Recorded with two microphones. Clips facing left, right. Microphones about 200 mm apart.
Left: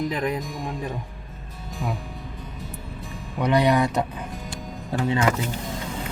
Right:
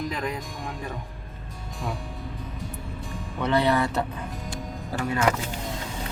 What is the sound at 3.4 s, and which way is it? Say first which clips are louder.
Speech: left 3 dB; 15° left (ahead or behind).